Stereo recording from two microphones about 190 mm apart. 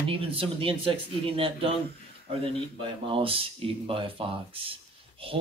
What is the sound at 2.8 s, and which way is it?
Speech, 30° right (ahead or behind).